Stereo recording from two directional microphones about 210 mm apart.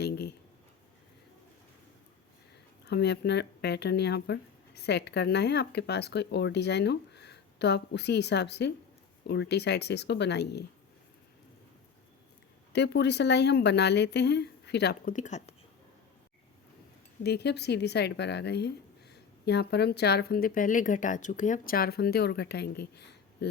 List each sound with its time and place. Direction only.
0.0 s a sound: 50° left (ahead or behind)
2.8 s speech: 50° left (ahead or behind)
12.7 s speech: 55° left (ahead or behind)
15.1 s speech: 35° left (ahead or behind)
17.2 s speech: 50° left (ahead or behind)